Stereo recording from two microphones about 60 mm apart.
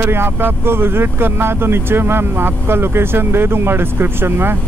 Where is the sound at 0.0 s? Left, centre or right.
Right.